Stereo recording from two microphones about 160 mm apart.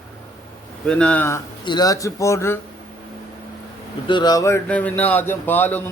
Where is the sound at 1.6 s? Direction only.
25° left (ahead or behind).